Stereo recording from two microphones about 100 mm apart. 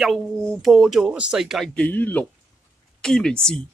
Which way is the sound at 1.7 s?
15° left (ahead or behind).